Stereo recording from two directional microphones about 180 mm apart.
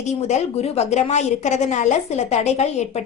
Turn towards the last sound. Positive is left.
turn(degrees=35)  # may be behind; listen again after turning